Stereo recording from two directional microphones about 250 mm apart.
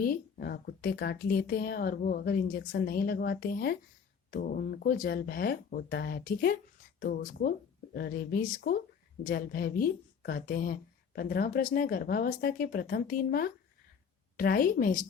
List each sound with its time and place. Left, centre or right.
0.0 s speech: left